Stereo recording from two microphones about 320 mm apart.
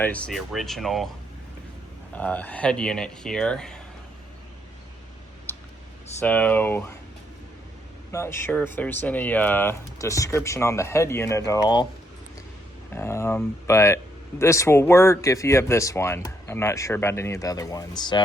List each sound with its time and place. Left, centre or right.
0.0 s speech: centre
2.1 s speech: centre
5.5 s a sound: centre
6.1 s speech: centre
8.1 s speech: centre
12.9 s speech: centre